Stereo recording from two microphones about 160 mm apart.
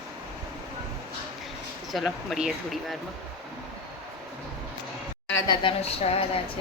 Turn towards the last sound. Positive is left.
turn(degrees=35)  # may be behind; listen again after turning